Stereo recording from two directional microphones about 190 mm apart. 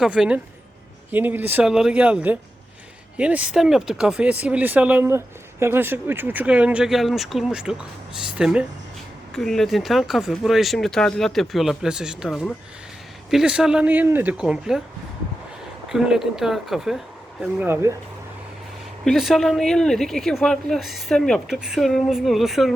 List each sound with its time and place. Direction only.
0.0 s speech: 5° right (ahead or behind)
15.9 s speech: centre (ahead or behind)
19.0 s speech: centre (ahead or behind)